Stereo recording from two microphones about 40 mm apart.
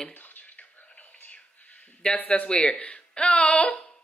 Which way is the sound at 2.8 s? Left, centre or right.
Left.